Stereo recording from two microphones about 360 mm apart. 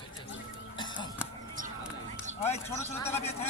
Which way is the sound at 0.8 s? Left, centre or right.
Centre.